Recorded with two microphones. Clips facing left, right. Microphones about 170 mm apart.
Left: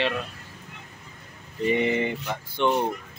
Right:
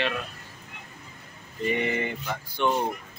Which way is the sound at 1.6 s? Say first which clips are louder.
Left 4 dB; 25° left (ahead or behind).